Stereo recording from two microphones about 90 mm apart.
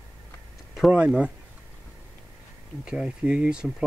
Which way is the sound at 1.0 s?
10° right (ahead or behind).